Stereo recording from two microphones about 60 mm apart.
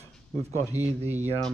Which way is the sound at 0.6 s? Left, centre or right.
Left.